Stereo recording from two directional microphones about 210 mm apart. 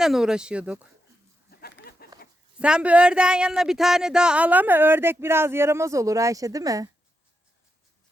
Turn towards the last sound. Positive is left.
turn(degrees=-15)  # may be behind; listen again after turning